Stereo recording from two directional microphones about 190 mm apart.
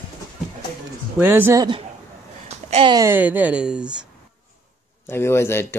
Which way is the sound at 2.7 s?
30° right (ahead or behind).